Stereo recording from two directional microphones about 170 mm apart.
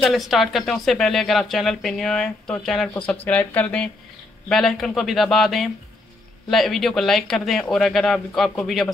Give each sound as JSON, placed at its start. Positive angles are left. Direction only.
{"t": 0.0, "sound": "speech", "side_deg": 0}